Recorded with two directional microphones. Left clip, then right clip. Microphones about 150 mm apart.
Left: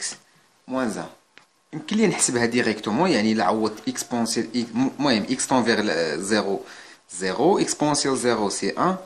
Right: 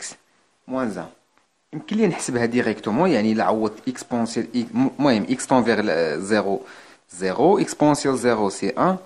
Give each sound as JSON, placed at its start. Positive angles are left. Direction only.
{"t": 0.7, "sound": "speech", "side_deg": -30}